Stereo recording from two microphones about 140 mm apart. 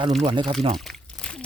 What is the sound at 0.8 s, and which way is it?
Crumpling, centre (ahead or behind).